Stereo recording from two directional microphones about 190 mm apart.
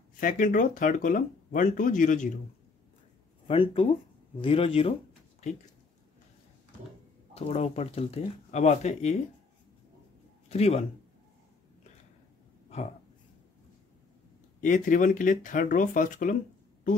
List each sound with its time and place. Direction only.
0.2 s speech: 45° left (ahead or behind)
3.4 s speech: 30° left (ahead or behind)
7.3 s speech: 35° left (ahead or behind)
10.5 s speech: 35° left (ahead or behind)
14.6 s speech: 40° left (ahead or behind)